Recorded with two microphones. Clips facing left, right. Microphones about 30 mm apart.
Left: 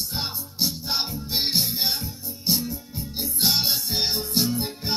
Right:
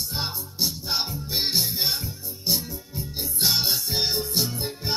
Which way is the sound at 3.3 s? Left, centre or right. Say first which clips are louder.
Even; left.